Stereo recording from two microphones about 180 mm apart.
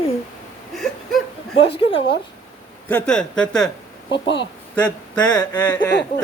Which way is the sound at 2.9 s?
5° left (ahead or behind).